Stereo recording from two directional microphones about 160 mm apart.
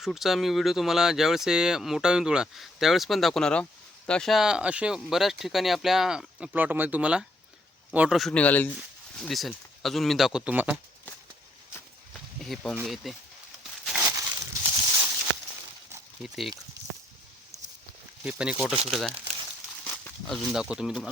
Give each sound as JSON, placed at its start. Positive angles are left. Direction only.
{"t": 0.0, "sound": "speech", "side_deg": 0}
{"t": 12.4, "sound": "speech", "side_deg": 0}
{"t": 13.8, "sound": "a sound", "side_deg": -5}
{"t": 14.1, "sound": "a sound", "side_deg": -20}
{"t": 16.2, "sound": "speech", "side_deg": 0}
{"t": 18.2, "sound": "speech", "side_deg": -5}